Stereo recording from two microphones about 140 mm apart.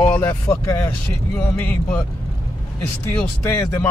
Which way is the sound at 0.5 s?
20° left (ahead or behind).